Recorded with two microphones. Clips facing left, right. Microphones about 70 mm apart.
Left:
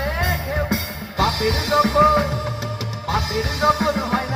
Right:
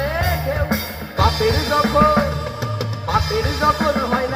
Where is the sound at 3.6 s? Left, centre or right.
Right.